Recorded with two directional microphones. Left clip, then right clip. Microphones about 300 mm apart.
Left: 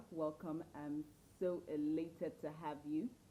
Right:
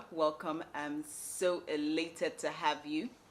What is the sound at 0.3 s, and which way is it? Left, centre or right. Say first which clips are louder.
Speech: right 10 dB; centre.